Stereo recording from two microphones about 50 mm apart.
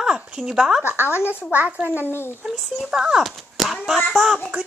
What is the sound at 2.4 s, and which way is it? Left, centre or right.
Speech, centre.